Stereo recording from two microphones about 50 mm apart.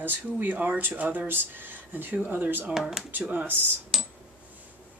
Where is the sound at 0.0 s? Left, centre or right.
Right.